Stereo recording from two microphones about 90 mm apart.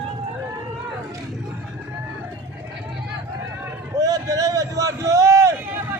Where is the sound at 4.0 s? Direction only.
40° right (ahead or behind).